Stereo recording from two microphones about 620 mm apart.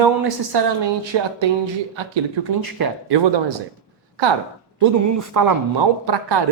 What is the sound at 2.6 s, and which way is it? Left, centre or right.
Speech, right.